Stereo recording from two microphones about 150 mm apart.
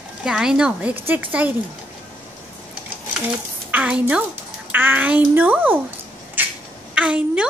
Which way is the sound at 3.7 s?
10° right (ahead or behind).